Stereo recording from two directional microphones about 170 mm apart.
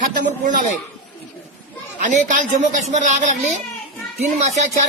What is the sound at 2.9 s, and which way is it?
Speech, 45° right (ahead or behind).